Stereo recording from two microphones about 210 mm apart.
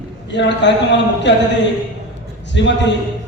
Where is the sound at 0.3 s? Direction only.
55° left (ahead or behind).